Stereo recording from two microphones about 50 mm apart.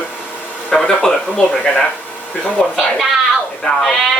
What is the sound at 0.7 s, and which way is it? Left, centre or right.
Speech, centre.